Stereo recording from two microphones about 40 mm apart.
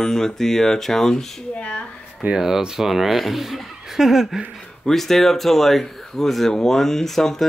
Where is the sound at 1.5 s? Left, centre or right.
Left.